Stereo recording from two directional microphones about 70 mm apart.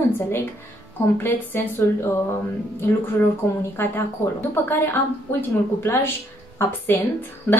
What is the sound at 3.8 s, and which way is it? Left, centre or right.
A woman's voice, left.